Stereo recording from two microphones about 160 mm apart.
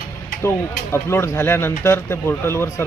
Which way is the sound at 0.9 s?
15° left (ahead or behind).